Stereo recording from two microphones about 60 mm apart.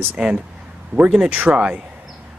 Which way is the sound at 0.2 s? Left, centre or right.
Centre.